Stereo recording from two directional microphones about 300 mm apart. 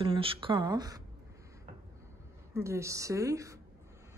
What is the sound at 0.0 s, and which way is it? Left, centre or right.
A woman's voice, centre.